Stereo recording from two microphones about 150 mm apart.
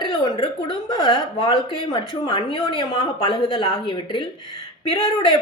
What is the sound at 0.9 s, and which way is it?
A woman's voice, 30° left (ahead or behind).